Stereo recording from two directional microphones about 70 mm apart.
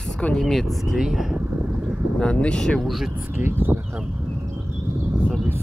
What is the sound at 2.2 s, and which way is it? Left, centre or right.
Speech, centre.